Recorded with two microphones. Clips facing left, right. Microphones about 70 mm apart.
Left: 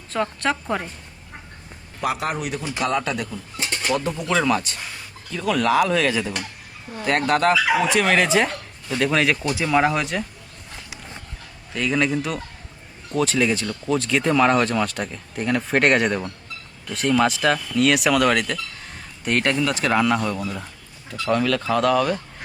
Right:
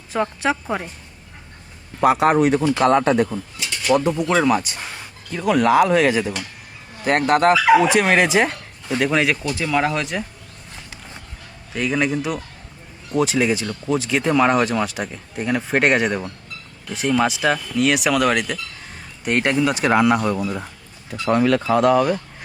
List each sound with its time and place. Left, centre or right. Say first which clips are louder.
0.1 s speech: right 2 dB; centre
2.2 s a man's voice: right 11 dB; right
3.6 s bird: right 3 dB; left
4.0 s speech: right 4 dB; centre
7.5 s speech: right 6 dB; right
7.9 s speech: right 2 dB; right; by 10.2 s centre
11.7 s speech: right 1 dB; centre